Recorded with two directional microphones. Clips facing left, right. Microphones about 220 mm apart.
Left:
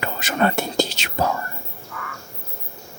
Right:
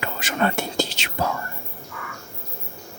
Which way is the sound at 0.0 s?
40° left (ahead or behind).